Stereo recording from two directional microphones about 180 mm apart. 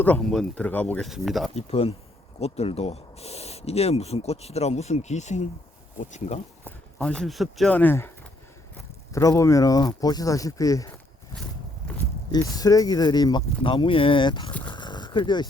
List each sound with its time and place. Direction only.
0.0 s speech: 5° left (ahead or behind)
1.5 s speech: 35° left (ahead or behind)
6.7 s speech: 5° left (ahead or behind)
9.1 s speech: 15° left (ahead or behind)
12.3 s speech: 20° left (ahead or behind)
14.7 s a sound: 25° left (ahead or behind)